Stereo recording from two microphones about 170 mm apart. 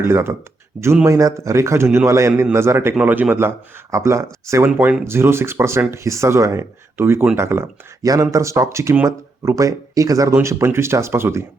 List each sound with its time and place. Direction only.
0.1 s speech: 15° right (ahead or behind)